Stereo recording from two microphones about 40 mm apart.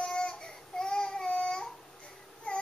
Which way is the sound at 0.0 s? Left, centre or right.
Left.